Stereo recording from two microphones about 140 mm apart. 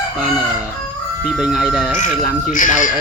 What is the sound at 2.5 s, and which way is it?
Speech, 70° left (ahead or behind).